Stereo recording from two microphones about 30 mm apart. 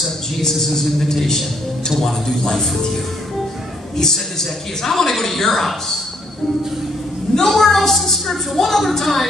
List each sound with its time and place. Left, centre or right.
0.4 s speech: centre
4.0 s speech: centre
7.3 s speech: centre